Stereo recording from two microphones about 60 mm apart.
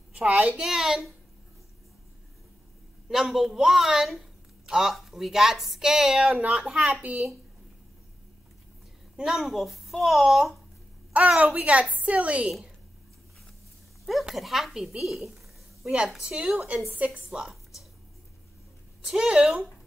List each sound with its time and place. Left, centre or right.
0.1 s a woman's voice: right
0.6 s speech: centre
3.1 s a man's voice: centre
6.7 s a woman's voice: right
9.1 s a man's voice: centre
11.3 s a woman's voice: right
14.0 s a man's voice: centre
15.2 s a sound: centre
16.2 s a woman's voice: centre
19.0 s speech: centre